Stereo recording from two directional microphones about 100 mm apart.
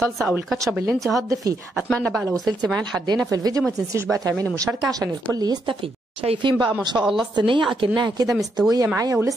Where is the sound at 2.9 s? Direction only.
45° right (ahead or behind).